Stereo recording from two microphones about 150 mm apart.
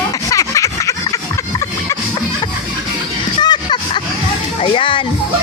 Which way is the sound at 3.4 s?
30° left (ahead or behind).